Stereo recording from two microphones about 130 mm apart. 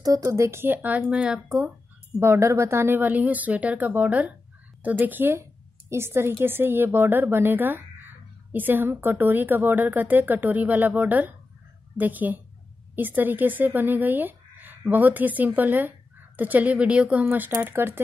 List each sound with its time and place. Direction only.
0.0 s speech: 30° right (ahead or behind); by 1.7 s 5° right (ahead or behind)
2.1 s a woman's voice: 20° right (ahead or behind)